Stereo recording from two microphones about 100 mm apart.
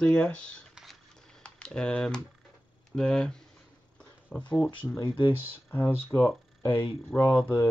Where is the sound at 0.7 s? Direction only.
5° left (ahead or behind).